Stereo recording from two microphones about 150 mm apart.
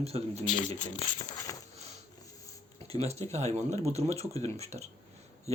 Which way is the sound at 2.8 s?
45° right (ahead or behind).